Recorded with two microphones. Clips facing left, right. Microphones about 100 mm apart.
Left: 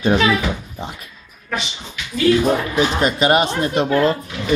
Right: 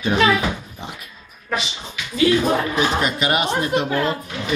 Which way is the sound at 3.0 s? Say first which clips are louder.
Left 5 dB; 35° left (ahead or behind).